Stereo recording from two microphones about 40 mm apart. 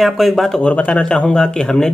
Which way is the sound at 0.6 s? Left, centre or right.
Left.